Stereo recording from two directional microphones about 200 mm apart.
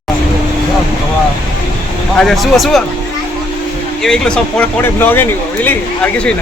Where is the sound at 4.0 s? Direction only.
5° left (ahead or behind).